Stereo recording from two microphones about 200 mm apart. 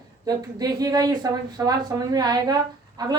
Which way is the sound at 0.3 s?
20° right (ahead or behind).